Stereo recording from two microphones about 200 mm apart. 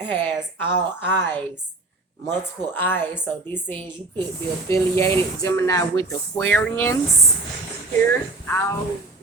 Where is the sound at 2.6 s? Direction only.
10° left (ahead or behind).